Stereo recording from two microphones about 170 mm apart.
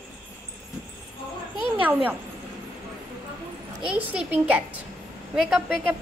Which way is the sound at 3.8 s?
5° right (ahead or behind).